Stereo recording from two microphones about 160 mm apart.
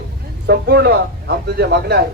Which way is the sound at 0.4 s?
90° right.